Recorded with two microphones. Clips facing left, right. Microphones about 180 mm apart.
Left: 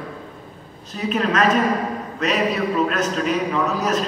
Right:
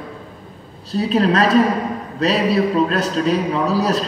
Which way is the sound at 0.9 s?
35° right (ahead or behind).